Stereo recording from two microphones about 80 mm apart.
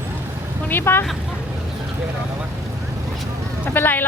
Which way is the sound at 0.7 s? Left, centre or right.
Left.